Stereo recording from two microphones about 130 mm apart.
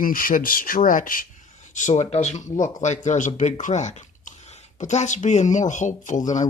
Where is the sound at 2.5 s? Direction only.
75° left (ahead or behind).